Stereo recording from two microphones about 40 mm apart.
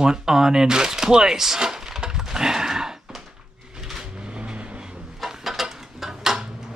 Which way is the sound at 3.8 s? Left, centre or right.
Centre.